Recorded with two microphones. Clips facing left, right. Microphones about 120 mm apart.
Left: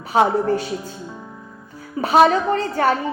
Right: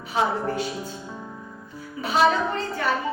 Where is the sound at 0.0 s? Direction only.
45° left (ahead or behind).